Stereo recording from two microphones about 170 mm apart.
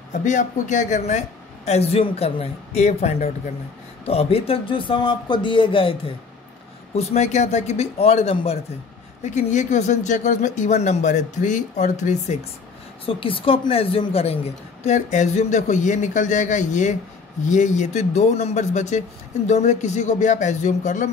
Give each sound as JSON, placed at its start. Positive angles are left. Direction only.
{"t": 0.1, "sound": "speech", "side_deg": 45}
{"t": 13.0, "sound": "speech", "side_deg": 30}